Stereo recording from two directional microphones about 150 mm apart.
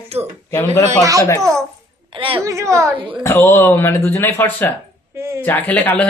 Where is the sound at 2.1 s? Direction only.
35° right (ahead or behind).